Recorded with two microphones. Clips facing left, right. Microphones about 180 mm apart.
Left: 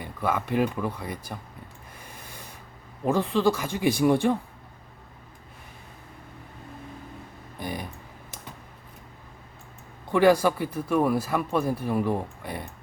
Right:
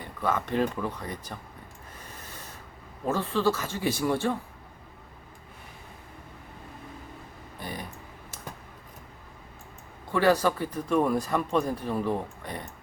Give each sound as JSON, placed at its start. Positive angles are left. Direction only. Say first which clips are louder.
{"t": 0.0, "sound": "speech", "louder": "left 1 dB", "side_deg": 10}
{"t": 3.0, "sound": "speech", "louder": "left 3 dB", "side_deg": 15}
{"t": 7.6, "sound": "a sound", "louder": "left 4 dB", "side_deg": 15}
{"t": 10.1, "sound": "speech", "louder": "left 3 dB", "side_deg": 15}